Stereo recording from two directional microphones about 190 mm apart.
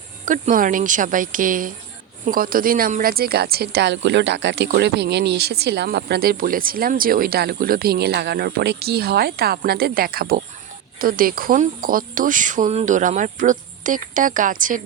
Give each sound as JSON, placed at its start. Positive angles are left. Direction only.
{"t": 0.3, "sound": "speech", "side_deg": -45}